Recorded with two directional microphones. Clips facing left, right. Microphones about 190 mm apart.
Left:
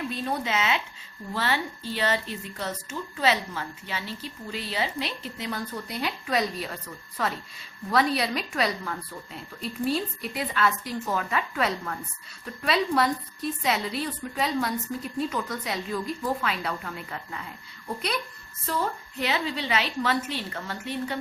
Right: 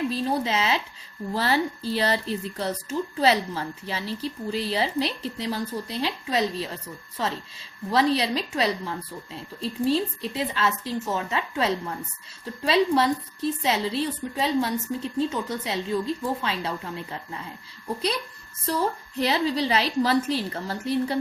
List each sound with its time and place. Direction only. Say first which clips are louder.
0.1 s a woman's voice: right 4 dB; 30° right (ahead or behind)
19.1 s a woman's voice: right 6 dB; 35° right (ahead or behind)